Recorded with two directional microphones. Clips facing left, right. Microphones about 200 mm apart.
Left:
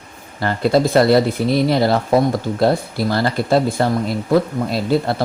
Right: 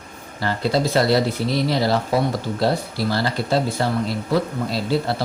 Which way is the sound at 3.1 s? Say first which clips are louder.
Left 5 dB; 50° left (ahead or behind).